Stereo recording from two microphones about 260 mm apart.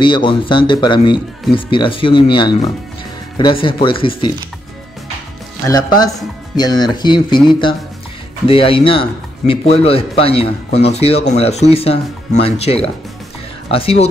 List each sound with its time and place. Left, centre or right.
0.0 s speech: centre
6.5 s speech: centre